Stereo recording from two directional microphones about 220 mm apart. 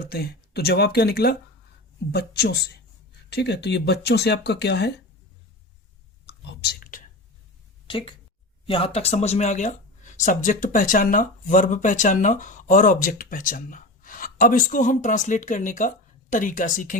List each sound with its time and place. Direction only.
0.0 s speech: 45° left (ahead or behind)
6.2 s whispering: 45° left (ahead or behind)
7.9 s speech: 25° left (ahead or behind)